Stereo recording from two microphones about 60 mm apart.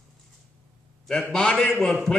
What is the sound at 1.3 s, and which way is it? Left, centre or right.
Speech, centre.